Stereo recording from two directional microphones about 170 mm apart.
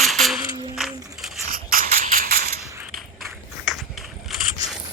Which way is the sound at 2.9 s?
Centre (ahead or behind).